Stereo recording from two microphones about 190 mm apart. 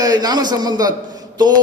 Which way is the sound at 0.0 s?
20° right (ahead or behind).